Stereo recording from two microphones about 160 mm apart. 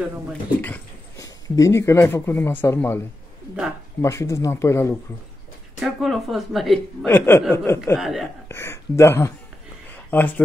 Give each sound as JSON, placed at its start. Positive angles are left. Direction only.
{"t": 0.3, "sound": "speech", "side_deg": 10}
{"t": 1.1, "sound": "speech", "side_deg": 20}
{"t": 4.0, "sound": "speech", "side_deg": 15}
{"t": 5.8, "sound": "a woman's voice", "side_deg": 0}
{"t": 7.1, "sound": "speech", "side_deg": 15}
{"t": 7.8, "sound": "a woman's voice", "side_deg": 0}
{"t": 8.5, "sound": "speech", "side_deg": 15}